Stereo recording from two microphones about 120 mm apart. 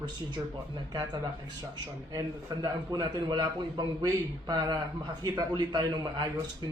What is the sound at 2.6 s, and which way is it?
Speech, 40° right (ahead or behind).